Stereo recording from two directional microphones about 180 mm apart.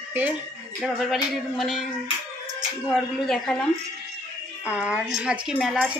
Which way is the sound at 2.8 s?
Centre (ahead or behind).